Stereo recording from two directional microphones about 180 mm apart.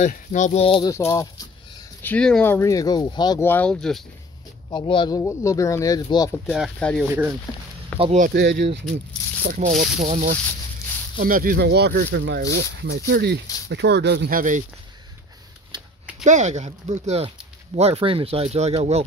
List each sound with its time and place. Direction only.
0.0 s speech: 40° left (ahead or behind)
0.8 s speech: 15° left (ahead or behind)
2.0 s speech: 5° left (ahead or behind); by 3.4 s 25° left (ahead or behind)
3.4 s speech: 10° left (ahead or behind)
4.6 s speech: 25° left (ahead or behind)
6.5 s speech: 5° left (ahead or behind)
8.0 s speech: 40° right (ahead or behind)
8.3 s speech: 70° right (ahead or behind)
9.4 s speech: 50° right (ahead or behind); by 14.4 s 70° right (ahead or behind)
16.3 s speech: 40° right (ahead or behind)